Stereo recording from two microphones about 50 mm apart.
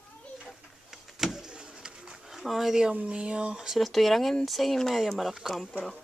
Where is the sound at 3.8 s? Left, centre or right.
Centre.